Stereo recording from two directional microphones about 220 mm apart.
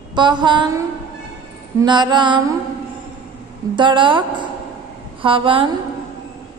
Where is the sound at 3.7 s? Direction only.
20° right (ahead or behind).